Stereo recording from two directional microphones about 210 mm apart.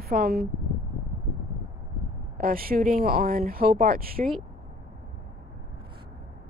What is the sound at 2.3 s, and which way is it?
Speech, 45° right (ahead or behind).